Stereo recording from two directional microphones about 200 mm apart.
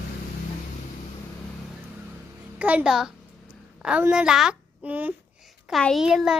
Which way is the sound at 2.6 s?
5° right (ahead or behind).